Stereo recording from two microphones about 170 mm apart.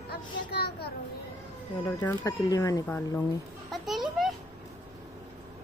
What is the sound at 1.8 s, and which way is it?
Speech, 20° left (ahead or behind).